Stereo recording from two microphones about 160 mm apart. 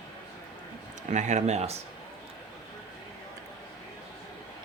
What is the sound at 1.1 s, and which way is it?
Speech, 50° right (ahead or behind).